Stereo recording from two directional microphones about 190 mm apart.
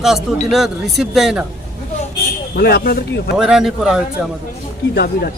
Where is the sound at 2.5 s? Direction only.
55° left (ahead or behind).